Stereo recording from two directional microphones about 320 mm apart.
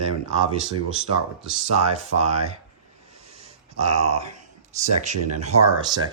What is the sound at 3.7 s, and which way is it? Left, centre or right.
Speech, right.